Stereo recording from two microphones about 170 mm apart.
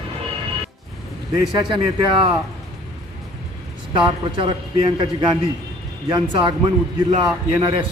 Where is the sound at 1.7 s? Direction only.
30° right (ahead or behind).